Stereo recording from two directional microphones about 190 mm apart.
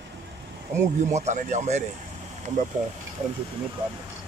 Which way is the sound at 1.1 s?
40° right (ahead or behind).